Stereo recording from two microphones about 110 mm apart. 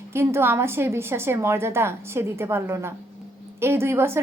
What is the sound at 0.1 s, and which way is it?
A woman's voice, 25° right (ahead or behind).